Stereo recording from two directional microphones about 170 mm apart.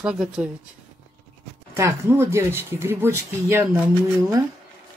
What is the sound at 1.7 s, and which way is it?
Speech, 15° right (ahead or behind).